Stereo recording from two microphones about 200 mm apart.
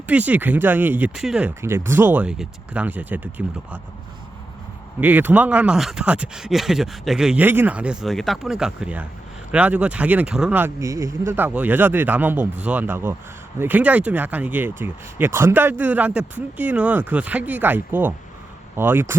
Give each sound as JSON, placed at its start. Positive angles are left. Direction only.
{"t": 0.1, "sound": "speech", "side_deg": -10}
{"t": 4.9, "sound": "speech", "side_deg": -10}